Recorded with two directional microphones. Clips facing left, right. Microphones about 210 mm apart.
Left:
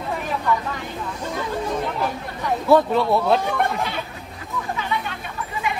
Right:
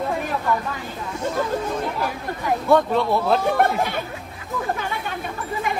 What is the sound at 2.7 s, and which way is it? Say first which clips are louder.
Speech: left 2 dB; centre (ahead or behind).